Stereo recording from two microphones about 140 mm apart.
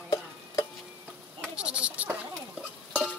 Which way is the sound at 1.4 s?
5° right (ahead or behind).